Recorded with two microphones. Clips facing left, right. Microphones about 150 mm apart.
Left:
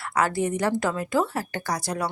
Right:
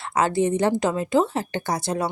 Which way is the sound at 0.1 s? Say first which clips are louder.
Right 3 dB; 25° right (ahead or behind).